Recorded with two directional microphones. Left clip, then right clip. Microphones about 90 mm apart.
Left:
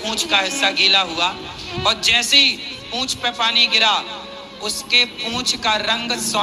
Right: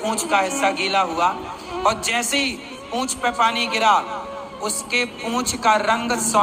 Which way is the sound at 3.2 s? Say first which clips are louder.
Right 2 dB; 15° right (ahead or behind).